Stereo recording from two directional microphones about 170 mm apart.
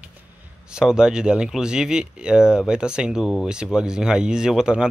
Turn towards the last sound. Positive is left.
turn(degrees=-5)  # may be behind; listen again after turning